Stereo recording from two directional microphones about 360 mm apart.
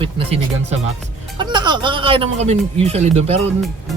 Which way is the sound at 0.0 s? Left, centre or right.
Centre.